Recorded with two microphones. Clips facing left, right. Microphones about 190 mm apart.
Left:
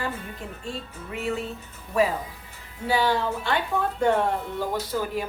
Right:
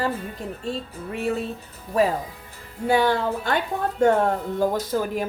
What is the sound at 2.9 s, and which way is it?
A woman's voice, 50° right (ahead or behind).